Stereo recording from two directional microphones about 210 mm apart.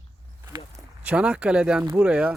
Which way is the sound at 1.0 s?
5° right (ahead or behind).